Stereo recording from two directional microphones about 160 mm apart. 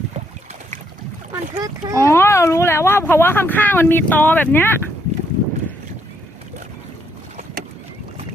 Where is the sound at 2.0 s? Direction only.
15° left (ahead or behind).